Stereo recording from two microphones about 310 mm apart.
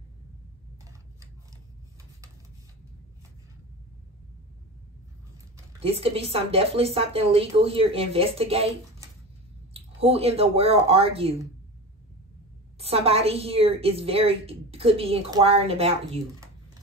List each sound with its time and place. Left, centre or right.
5.8 s a woman's voice: centre
12.7 s a woman's voice: centre